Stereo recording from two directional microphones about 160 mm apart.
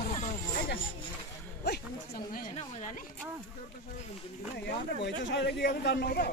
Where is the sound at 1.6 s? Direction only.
80° left.